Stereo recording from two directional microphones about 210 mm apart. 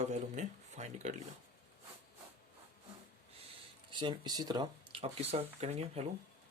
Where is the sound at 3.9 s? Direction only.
20° right (ahead or behind).